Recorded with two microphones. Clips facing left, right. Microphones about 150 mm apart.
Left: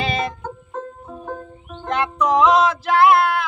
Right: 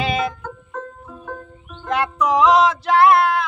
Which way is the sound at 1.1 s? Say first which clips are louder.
Left 3 dB; 30° left (ahead or behind).